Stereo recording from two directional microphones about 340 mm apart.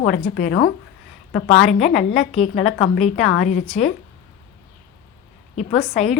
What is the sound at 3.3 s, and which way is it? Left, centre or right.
Speech, left.